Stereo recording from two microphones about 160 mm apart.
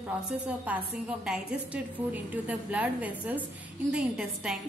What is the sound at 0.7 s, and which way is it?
A woman's voice, 10° right (ahead or behind).